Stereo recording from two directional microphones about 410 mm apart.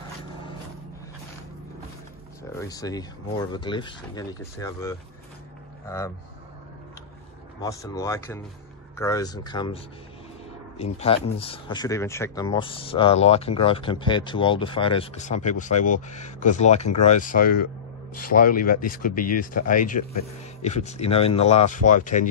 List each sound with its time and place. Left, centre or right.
2.6 s speech: centre
7.6 s speech: centre
10.8 s speech: centre